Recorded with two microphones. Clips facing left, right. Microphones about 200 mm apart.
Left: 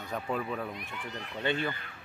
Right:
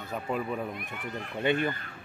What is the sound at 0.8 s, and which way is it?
Speech, 55° right (ahead or behind).